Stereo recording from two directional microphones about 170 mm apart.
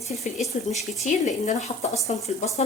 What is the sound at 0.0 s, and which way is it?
Speech, 40° left (ahead or behind).